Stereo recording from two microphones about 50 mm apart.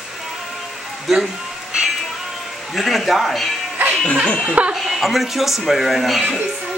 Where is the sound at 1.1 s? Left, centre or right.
Centre.